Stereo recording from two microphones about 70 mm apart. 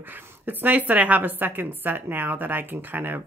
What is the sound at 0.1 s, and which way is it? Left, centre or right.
A woman's voice, right.